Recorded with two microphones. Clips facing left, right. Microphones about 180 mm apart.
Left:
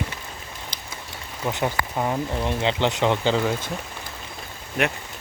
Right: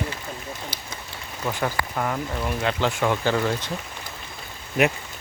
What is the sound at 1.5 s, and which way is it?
Speech, 20° left (ahead or behind).